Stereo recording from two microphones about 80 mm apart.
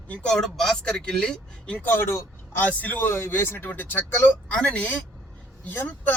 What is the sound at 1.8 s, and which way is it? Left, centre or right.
Speech, left.